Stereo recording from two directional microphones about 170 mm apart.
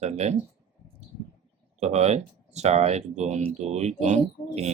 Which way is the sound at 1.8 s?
40° right (ahead or behind).